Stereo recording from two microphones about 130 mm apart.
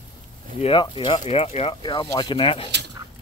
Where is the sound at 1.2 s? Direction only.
55° left (ahead or behind).